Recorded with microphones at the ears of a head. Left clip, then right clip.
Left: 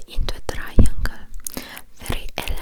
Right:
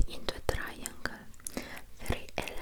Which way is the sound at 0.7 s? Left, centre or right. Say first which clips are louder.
Left 12 dB; left.